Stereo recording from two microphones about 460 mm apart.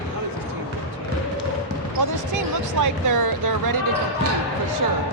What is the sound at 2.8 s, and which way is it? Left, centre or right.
Speech, right.